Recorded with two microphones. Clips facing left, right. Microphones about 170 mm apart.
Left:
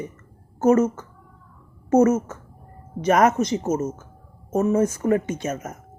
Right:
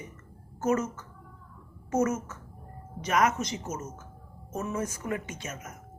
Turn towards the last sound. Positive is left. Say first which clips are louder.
# left 12 dB
turn(degrees=45)  # may be behind; listen again after turning